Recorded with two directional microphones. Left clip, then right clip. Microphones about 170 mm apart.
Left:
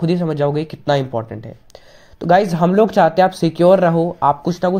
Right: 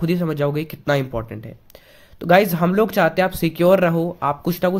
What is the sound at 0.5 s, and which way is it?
Speech, 40° right (ahead or behind).